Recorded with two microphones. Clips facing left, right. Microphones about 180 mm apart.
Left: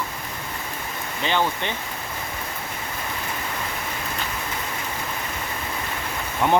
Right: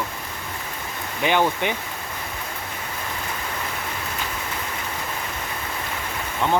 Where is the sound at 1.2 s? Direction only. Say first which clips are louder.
Right 3 dB; 15° right (ahead or behind).